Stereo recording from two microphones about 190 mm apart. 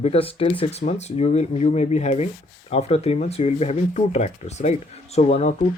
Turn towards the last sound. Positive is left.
turn(degrees=35)  # may be behind; listen again after turning